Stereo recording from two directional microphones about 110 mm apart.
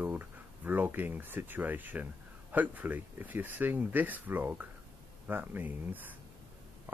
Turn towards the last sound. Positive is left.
turn(degrees=-15)  # may be behind; listen again after turning